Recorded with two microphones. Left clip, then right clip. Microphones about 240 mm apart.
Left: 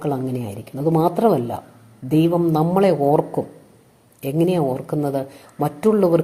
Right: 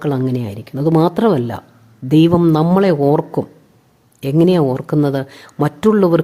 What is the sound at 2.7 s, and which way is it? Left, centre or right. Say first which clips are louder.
Speech: right 3 dB; right.